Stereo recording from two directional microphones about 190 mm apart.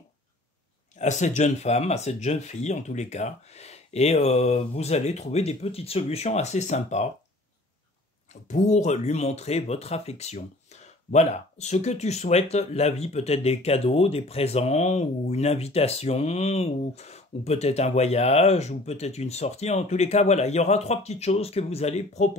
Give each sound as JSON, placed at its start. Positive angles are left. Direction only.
{"t": 0.9, "sound": "speech", "side_deg": 40}
{"t": 8.5, "sound": "speech", "side_deg": 35}